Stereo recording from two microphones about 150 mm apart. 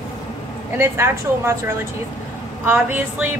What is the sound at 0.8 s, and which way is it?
Speech, 15° right (ahead or behind).